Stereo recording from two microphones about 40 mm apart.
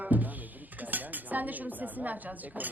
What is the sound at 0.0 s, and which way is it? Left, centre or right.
Dishes, right.